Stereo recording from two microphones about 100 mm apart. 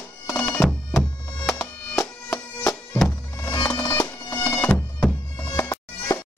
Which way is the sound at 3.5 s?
40° left (ahead or behind).